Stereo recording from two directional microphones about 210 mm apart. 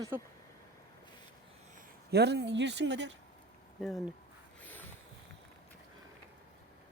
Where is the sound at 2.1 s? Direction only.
55° right (ahead or behind).